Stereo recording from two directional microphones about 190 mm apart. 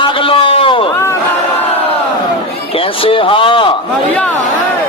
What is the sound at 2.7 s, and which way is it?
Speech, 30° left (ahead or behind).